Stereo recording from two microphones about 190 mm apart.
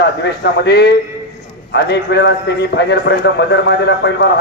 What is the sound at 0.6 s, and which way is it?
A man's voice, 60° left (ahead or behind).